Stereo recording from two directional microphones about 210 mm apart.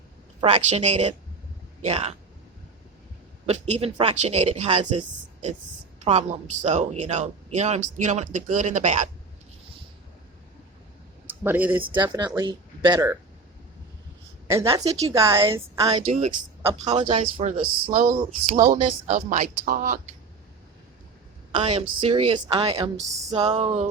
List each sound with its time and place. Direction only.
0.4 s speech: 30° right (ahead or behind)
3.4 s speech: 30° right (ahead or behind)
6.1 s speech: 35° right (ahead or behind)
11.4 s a woman's voice: 10° right (ahead or behind)
14.4 s a woman's voice: 15° right (ahead or behind)
16.1 s a woman's voice: 30° right (ahead or behind)
21.5 s a woman's voice: 30° right (ahead or behind)